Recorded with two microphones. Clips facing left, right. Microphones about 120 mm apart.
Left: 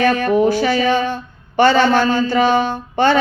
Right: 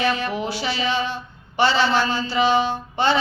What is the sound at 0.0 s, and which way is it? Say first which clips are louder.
Speech: left 9 dB; 50° left (ahead or behind).